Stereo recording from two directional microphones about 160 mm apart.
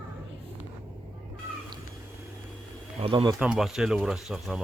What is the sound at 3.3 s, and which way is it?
Speech, 5° right (ahead or behind).